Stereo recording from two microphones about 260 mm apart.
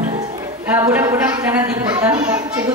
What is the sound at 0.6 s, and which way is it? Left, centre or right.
A man's voice, centre.